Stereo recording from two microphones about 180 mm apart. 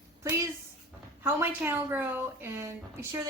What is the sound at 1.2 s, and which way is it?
A woman's voice, 10° right (ahead or behind).